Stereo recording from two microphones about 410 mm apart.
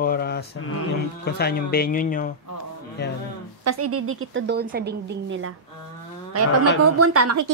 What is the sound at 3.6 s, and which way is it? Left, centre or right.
A woman's voice, right.